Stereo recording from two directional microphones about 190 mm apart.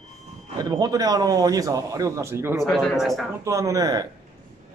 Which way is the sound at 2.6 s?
Centre (ahead or behind).